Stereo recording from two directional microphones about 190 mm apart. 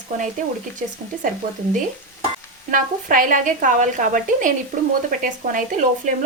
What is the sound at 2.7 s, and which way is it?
A woman's voice, 45° right (ahead or behind).